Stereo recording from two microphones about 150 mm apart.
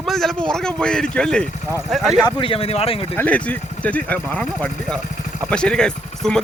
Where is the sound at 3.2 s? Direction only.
10° left (ahead or behind).